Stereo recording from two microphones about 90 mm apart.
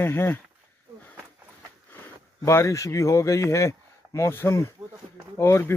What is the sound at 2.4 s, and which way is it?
Speech, 35° left (ahead or behind).